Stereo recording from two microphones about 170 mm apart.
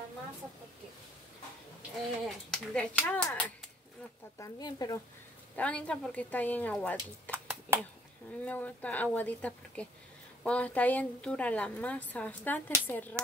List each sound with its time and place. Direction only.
2.2 s a woman's voice: 5° left (ahead or behind)
4.4 s speech: 20° left (ahead or behind)
5.6 s a woman's voice: 5° left (ahead or behind)
7.2 s a sound: 10° right (ahead or behind)
8.3 s a woman's voice: 10° left (ahead or behind)